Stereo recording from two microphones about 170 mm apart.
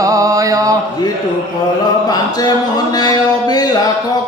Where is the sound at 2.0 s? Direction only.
25° left (ahead or behind).